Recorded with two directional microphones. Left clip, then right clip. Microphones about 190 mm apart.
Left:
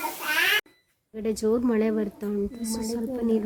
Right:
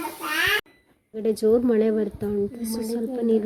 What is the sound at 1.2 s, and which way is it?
A woman's voice, 5° right (ahead or behind).